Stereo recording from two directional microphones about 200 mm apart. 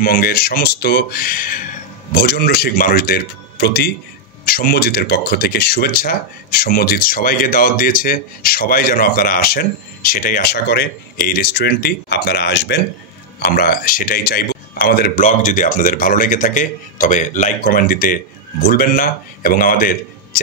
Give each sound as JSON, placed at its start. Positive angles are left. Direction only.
{"t": 0.0, "sound": "speech", "side_deg": 45}